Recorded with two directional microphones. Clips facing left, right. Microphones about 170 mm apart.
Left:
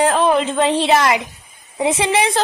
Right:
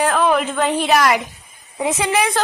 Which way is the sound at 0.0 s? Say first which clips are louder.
Left 2 dB; 25° left (ahead or behind).